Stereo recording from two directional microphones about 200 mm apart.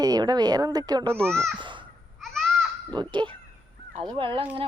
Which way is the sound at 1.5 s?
25° right (ahead or behind).